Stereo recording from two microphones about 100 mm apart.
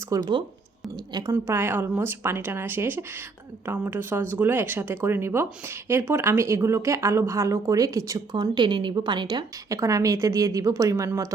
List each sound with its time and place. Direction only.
0.1 s a woman's voice: 50° right (ahead or behind)
1.3 s speech: 25° right (ahead or behind)
8.4 s speech: 50° right (ahead or behind)
9.6 s speech: 35° right (ahead or behind)